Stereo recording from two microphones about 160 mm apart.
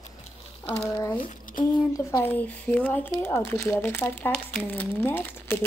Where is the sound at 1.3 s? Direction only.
60° left (ahead or behind).